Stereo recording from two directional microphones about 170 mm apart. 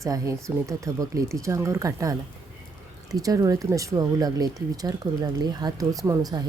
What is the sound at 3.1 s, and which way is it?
Speech, 20° right (ahead or behind).